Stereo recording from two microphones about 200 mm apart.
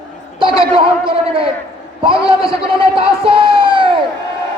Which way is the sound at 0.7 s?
25° right (ahead or behind).